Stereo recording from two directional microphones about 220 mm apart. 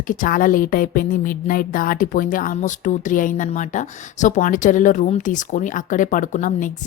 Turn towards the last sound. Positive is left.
turn(degrees=35)  # may be behind; listen again after turning